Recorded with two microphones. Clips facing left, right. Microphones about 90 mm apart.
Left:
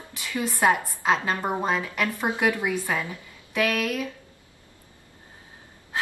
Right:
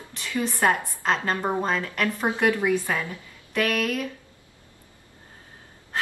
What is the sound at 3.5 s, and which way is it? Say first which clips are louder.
Speech: even; 5° left (ahead or behind).